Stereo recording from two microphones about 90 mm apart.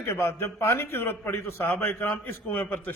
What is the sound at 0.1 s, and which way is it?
A man's voice, 25° left (ahead or behind).